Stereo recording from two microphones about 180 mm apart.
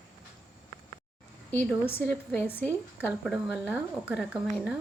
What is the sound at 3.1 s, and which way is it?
Speech, 5° right (ahead or behind).